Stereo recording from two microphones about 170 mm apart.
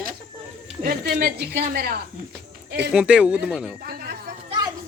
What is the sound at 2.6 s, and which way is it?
Speech, 80° right.